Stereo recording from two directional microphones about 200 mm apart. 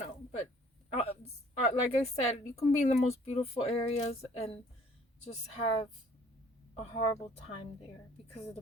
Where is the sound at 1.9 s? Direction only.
30° left (ahead or behind).